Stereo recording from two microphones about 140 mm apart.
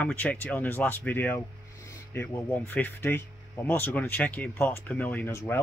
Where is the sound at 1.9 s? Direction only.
15° left (ahead or behind).